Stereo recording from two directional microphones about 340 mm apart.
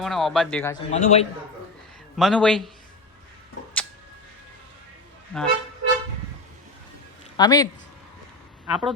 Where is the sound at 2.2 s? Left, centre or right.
Centre.